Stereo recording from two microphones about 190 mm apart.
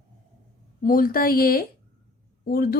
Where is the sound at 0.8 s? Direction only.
50° left (ahead or behind).